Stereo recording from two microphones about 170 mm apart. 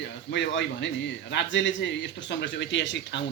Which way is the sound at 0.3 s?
90° left.